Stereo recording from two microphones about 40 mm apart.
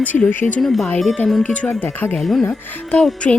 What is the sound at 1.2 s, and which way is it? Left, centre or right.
Speech, left.